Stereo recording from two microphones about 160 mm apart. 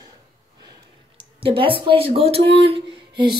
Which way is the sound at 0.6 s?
30° right (ahead or behind).